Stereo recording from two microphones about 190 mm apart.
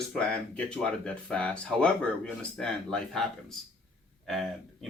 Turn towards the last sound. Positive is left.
turn(degrees=0)  # may be behind; listen again after turning